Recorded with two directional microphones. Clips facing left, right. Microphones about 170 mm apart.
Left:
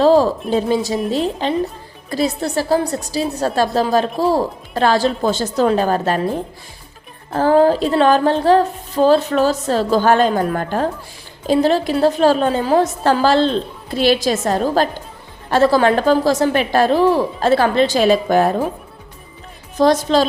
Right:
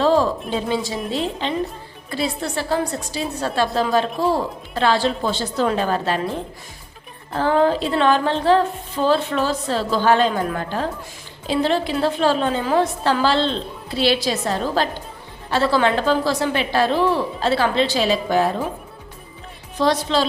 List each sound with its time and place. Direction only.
0.0 s music: 35° left (ahead or behind)
1.4 s a woman's voice: 40° left (ahead or behind)
2.0 s music: 40° left (ahead or behind)
7.3 s music: 40° left (ahead or behind)
11.4 s a woman's voice: 40° left (ahead or behind)
19.7 s a woman's voice: 45° left (ahead or behind)